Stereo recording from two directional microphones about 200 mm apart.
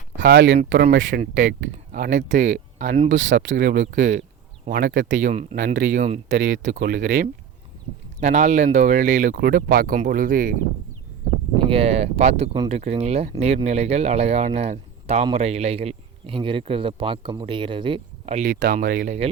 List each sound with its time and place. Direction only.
0.2 s speech: 50° right (ahead or behind)
1.9 s speech: 40° right (ahead or behind)
3.1 s speech: 65° right (ahead or behind)
3.9 s speech: 40° right (ahead or behind)
5.5 s speech: 50° right (ahead or behind)
6.0 s speech: 35° right (ahead or behind)
6.3 s speech: 65° right (ahead or behind)
6.7 s speech: 50° right (ahead or behind)
8.2 s speech: 35° right (ahead or behind)
9.3 s speech: 50° right (ahead or behind)
11.7 s speech: 30° right (ahead or behind)
18.5 s speech: 55° right (ahead or behind)
19.0 s speech: 35° right (ahead or behind)